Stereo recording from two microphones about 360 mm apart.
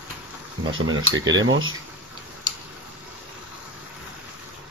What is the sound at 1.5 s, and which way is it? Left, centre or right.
Speech, right.